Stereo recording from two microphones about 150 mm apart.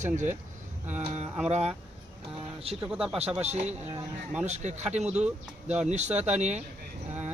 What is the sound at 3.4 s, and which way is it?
Speech, 45° right (ahead or behind).